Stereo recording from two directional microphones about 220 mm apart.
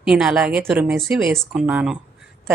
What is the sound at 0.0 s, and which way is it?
A woman's voice, 5° right (ahead or behind).